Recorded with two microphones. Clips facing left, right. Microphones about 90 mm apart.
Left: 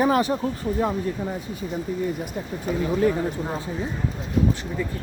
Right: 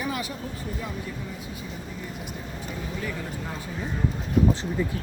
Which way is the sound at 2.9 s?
40° left (ahead or behind).